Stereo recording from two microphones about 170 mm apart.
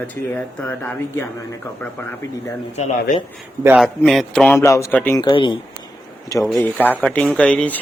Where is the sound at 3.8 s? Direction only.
Centre (ahead or behind).